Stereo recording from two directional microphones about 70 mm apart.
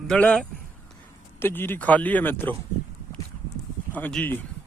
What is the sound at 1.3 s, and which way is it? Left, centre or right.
Speech, left.